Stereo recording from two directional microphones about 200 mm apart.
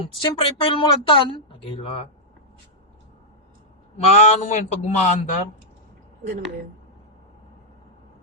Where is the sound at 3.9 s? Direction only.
35° left (ahead or behind).